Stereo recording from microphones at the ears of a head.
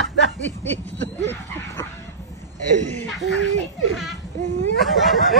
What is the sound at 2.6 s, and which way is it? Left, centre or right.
Speech, right.